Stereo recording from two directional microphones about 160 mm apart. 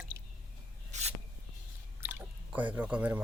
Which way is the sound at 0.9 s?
45° right (ahead or behind).